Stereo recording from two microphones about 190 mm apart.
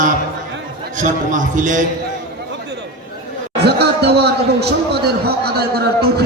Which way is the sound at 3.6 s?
60° right (ahead or behind).